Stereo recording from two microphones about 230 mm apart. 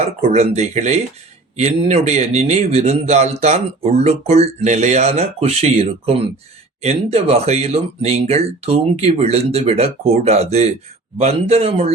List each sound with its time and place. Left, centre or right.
0.0 s speech: right